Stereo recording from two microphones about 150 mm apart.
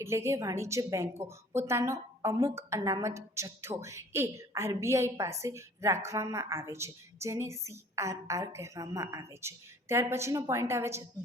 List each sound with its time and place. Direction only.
0.0 s a woman's voice: 20° right (ahead or behind)